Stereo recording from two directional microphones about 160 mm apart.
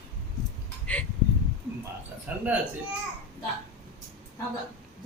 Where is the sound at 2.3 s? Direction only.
10° right (ahead or behind).